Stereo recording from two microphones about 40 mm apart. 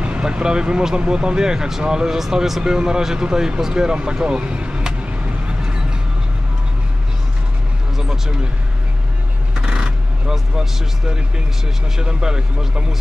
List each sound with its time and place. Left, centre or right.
0.0 s speech: right; by 2.6 s centre
2.6 s speech: centre
5.5 s music: right
9.6 s vehicle: right
10.3 s speech: centre
12.0 s speech: centre